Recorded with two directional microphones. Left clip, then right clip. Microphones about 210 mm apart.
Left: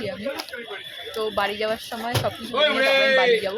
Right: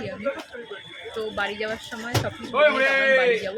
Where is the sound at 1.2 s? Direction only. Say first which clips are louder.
Left 3 dB; centre (ahead or behind).